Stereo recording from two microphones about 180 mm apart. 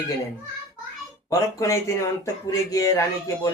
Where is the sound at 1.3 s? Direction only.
15° left (ahead or behind).